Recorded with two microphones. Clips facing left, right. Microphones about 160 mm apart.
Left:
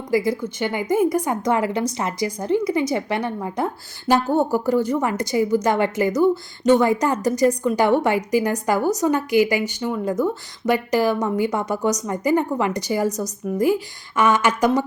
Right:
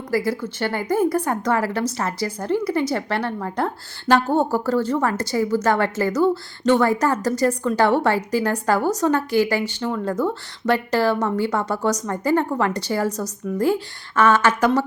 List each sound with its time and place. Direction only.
0.3 s a woman's voice: 15° left (ahead or behind)